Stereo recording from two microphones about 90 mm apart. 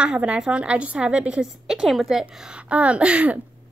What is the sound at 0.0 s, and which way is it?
Speech, 10° right (ahead or behind).